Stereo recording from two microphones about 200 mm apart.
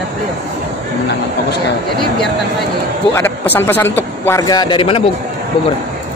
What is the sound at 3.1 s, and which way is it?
A man's voice, 10° left (ahead or behind).